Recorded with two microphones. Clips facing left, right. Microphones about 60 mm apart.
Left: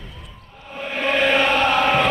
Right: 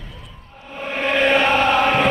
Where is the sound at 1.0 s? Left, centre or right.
Right.